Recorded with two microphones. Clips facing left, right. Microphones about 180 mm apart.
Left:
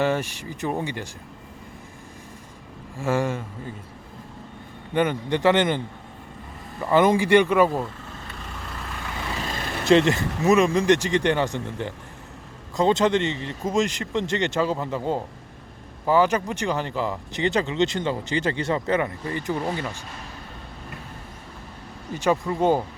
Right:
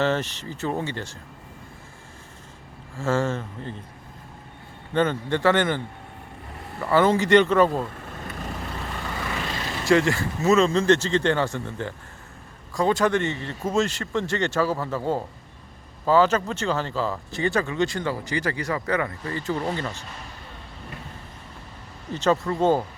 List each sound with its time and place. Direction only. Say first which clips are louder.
0.0 s speech: even; 10° left (ahead or behind)
3.0 s speech: even; 15° left (ahead or behind)
4.9 s speech: even; 15° left (ahead or behind)
6.8 s speech: left 1 dB; 15° left (ahead or behind)
9.8 s speech: left 2 dB; 20° left (ahead or behind)
22.1 s speech: right 1 dB; 10° left (ahead or behind)